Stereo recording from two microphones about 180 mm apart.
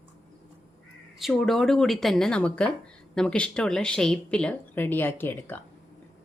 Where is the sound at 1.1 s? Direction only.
Centre (ahead or behind).